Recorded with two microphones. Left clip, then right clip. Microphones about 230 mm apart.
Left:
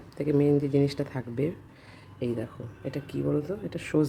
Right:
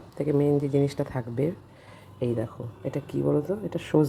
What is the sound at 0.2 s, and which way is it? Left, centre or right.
Speech, centre.